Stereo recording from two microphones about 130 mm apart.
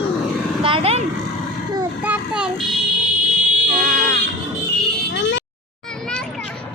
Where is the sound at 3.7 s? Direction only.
90° right.